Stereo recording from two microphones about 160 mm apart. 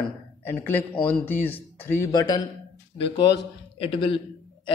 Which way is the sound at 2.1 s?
25° left (ahead or behind).